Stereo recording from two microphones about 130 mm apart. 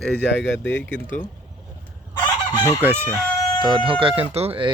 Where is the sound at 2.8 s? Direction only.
15° right (ahead or behind).